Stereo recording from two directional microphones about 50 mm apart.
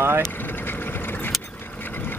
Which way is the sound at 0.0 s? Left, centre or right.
Right.